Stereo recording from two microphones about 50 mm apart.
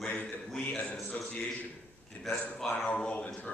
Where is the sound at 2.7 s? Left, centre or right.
Centre.